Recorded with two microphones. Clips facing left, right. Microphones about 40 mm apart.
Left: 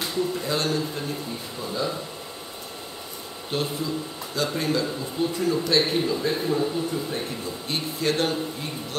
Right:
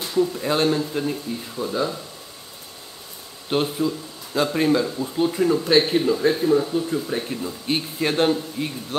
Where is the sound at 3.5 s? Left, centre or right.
Right.